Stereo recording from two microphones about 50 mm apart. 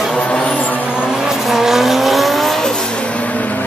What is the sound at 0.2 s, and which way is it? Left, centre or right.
Vehicle, centre.